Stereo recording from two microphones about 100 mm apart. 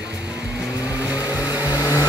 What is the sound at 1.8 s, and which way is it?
Vehicle, 35° left (ahead or behind).